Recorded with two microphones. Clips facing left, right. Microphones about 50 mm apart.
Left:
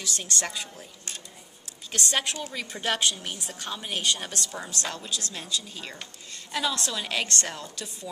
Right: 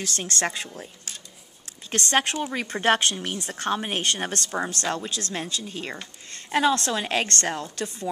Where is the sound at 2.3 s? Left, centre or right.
Right.